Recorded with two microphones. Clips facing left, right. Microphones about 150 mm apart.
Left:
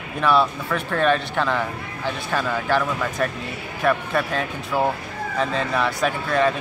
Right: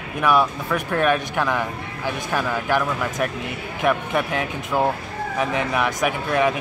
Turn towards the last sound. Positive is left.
turn(degrees=-15)  # may be behind; listen again after turning